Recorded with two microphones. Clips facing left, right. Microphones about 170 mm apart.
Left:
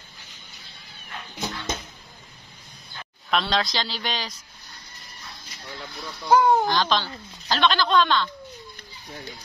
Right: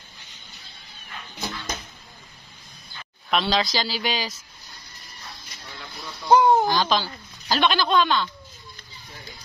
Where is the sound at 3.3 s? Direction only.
Centre (ahead or behind).